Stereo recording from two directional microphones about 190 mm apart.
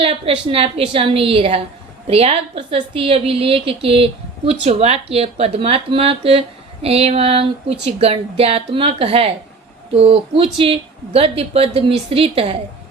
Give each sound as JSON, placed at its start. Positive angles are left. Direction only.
{"t": 0.0, "sound": "a woman's voice", "side_deg": -30}